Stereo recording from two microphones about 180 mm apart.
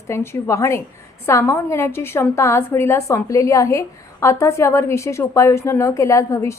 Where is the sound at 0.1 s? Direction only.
15° left (ahead or behind).